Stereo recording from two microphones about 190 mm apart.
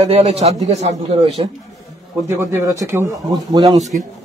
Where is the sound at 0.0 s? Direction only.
30° right (ahead or behind).